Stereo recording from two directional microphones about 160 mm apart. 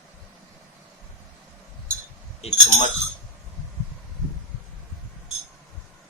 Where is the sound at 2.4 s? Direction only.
40° left (ahead or behind).